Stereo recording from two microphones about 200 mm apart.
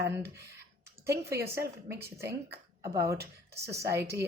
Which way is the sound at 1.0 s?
15° right (ahead or behind).